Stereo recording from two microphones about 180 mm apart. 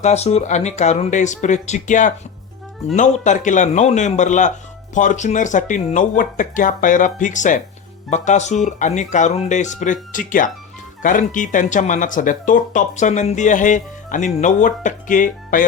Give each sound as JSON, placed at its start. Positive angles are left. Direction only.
{"t": 0.0, "sound": "speech", "side_deg": 40}